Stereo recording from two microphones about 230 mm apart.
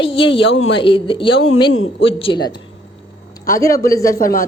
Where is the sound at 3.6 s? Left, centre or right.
Centre.